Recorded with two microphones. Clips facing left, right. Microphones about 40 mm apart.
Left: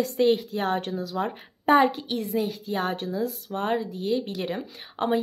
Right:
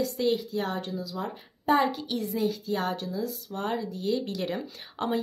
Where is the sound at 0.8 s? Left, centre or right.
Left.